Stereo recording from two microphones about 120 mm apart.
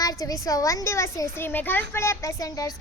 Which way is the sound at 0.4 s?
30° left (ahead or behind).